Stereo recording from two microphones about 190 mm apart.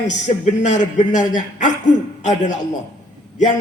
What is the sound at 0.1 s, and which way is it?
A man's voice, 40° left (ahead or behind).